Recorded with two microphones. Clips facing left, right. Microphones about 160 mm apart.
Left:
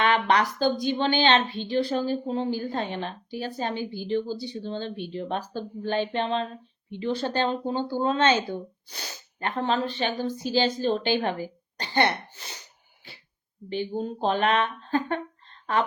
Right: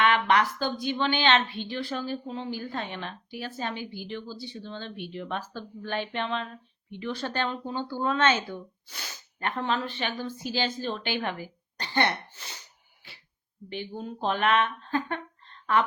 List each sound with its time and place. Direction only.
0.0 s speech: 35° left (ahead or behind)
13.7 s speech: 35° left (ahead or behind)